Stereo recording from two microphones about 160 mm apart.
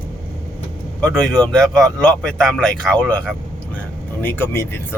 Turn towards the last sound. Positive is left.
turn(degrees=15)  # may be behind; listen again after turning